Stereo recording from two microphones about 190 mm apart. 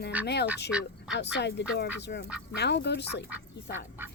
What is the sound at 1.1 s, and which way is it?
Speech, 65° left (ahead or behind).